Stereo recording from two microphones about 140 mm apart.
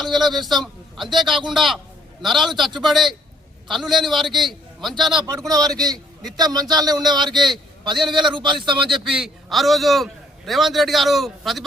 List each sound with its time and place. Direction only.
0.0 s a man's voice: centre (ahead or behind)
5.5 s speech: 25° right (ahead or behind)
9.0 s a man's voice: 5° right (ahead or behind)